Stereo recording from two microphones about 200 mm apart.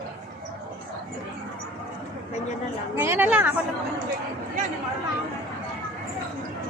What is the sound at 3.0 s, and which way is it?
Speech, 10° right (ahead or behind).